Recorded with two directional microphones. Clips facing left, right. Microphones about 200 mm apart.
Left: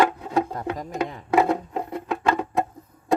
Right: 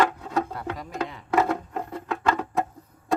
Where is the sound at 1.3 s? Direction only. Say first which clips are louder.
Left 3 dB; 15° left (ahead or behind).